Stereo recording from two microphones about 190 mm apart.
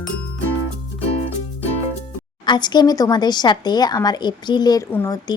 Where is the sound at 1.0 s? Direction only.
30° left (ahead or behind).